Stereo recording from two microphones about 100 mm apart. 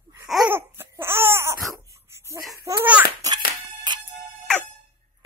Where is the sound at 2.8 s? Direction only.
15° right (ahead or behind).